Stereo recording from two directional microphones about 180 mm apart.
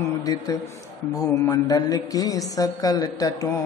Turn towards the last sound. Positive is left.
turn(degrees=20)  # may be behind; listen again after turning